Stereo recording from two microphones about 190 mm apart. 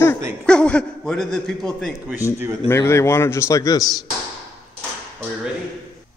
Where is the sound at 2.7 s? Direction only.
15° left (ahead or behind).